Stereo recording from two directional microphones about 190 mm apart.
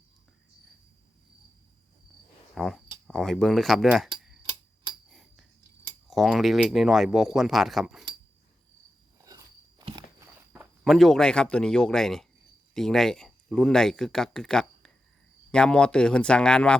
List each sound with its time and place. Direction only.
2.6 s speech: centre (ahead or behind)
5.0 s a sound: centre (ahead or behind)
6.1 s speech: centre (ahead or behind)
9.2 s biting: 20° right (ahead or behind)
10.8 s speech: centre (ahead or behind)